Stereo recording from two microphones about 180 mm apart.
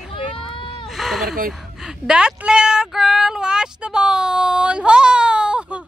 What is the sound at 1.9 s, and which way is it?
Speech, 5° right (ahead or behind).